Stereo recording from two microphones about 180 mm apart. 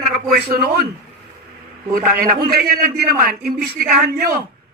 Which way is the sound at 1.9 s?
55° right (ahead or behind).